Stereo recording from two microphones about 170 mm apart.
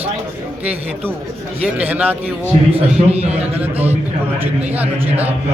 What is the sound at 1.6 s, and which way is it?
Speech, 10° right (ahead or behind).